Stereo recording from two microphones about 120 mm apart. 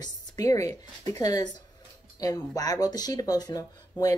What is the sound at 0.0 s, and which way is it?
Speech, 30° left (ahead or behind).